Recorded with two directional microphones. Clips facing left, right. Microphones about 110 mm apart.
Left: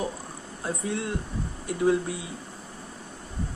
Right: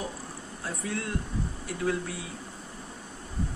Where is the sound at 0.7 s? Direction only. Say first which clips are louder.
Left 4 dB; 20° left (ahead or behind).